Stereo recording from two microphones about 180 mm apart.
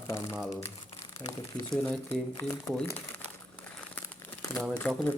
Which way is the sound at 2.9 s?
10° left (ahead or behind).